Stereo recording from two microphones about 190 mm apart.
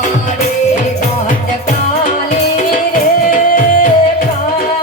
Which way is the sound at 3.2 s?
45° left (ahead or behind).